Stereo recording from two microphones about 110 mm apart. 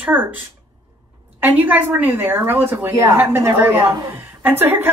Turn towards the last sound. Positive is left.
turn(degrees=-20)  # may be behind; listen again after turning